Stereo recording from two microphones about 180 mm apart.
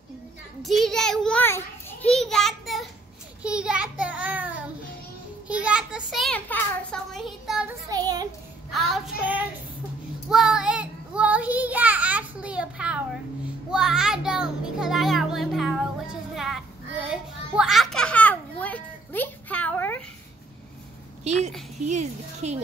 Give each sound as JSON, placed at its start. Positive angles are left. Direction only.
{"t": 0.6, "sound": "a child's voice", "side_deg": 0}
{"t": 2.1, "sound": "a sound", "side_deg": 0}
{"t": 7.9, "sound": "a sound", "side_deg": -20}
{"t": 8.6, "sound": "child singing", "side_deg": 0}
{"t": 13.7, "sound": "music", "side_deg": -5}
{"t": 21.8, "sound": "speech", "side_deg": -40}